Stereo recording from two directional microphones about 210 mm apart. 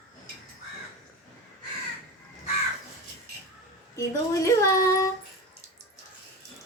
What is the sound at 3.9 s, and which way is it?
Speech, 15° left (ahead or behind).